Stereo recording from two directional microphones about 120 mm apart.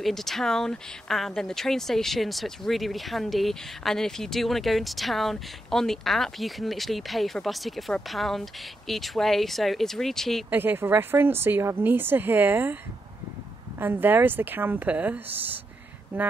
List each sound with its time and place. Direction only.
0.0 s speech: centre (ahead or behind)
10.5 s speech: 15° right (ahead or behind)
13.7 s speech: 15° right (ahead or behind)